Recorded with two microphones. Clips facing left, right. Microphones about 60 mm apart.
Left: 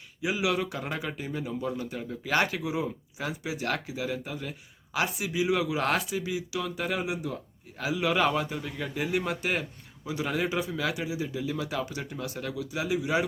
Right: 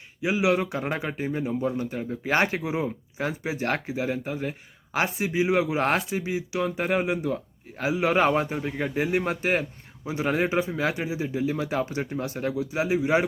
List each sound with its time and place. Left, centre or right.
0.2 s a man's voice: right